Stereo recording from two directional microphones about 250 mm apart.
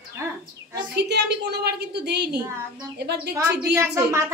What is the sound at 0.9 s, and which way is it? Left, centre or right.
A woman's voice, right.